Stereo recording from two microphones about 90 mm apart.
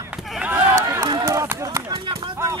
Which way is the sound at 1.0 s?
45° right (ahead or behind).